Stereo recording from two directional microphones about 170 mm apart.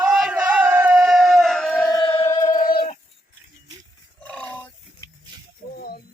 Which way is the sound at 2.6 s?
60° left (ahead or behind).